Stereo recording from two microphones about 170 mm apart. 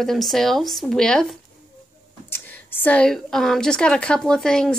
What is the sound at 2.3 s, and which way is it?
A woman's voice, 10° left (ahead or behind).